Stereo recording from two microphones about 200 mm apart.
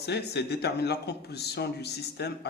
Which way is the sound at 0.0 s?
55° left (ahead or behind).